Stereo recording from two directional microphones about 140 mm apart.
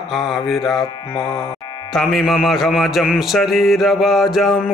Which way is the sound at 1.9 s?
Centre (ahead or behind).